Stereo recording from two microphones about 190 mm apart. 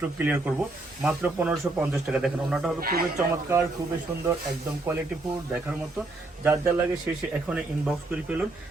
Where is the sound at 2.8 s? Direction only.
55° right (ahead or behind).